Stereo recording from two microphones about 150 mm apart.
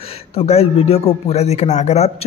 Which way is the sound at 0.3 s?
40° left (ahead or behind).